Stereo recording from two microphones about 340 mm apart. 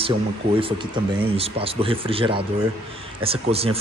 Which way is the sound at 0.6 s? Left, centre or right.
Centre.